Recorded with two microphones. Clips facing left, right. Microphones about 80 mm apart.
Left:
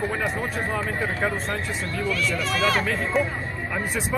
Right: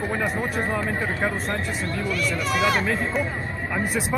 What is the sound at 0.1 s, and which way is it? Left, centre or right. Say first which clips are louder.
Speech: right 1 dB; centre.